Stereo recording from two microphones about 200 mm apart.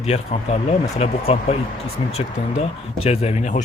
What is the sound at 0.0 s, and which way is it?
Speech, 30° left (ahead or behind).